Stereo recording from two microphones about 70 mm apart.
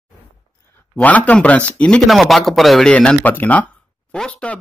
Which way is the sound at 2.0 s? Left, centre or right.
Centre.